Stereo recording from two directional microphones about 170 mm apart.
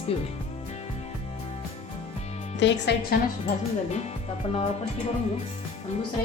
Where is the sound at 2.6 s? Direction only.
85° left.